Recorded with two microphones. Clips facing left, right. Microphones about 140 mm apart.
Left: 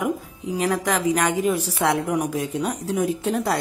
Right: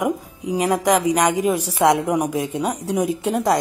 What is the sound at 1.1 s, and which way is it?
Speech, 35° right (ahead or behind).